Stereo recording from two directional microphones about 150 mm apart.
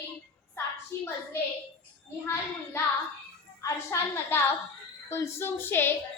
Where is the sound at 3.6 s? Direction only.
20° left (ahead or behind).